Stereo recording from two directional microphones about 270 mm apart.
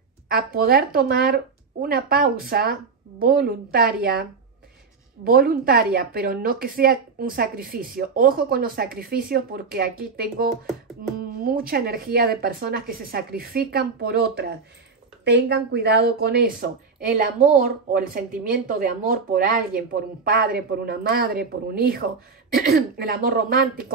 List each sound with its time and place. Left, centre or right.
0.3 s a woman's voice: right